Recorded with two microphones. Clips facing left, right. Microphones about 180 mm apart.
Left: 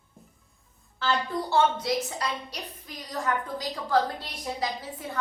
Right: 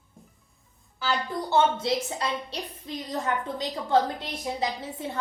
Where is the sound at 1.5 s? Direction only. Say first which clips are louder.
Right 1 dB; 25° right (ahead or behind).